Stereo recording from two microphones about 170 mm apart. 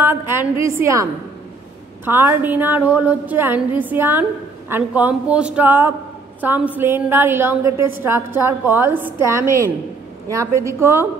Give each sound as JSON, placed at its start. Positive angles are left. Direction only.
{"t": 0.0, "sound": "a sound", "side_deg": -15}
{"t": 0.7, "sound": "a woman's voice", "side_deg": -15}
{"t": 2.0, "sound": "a woman's voice", "side_deg": -15}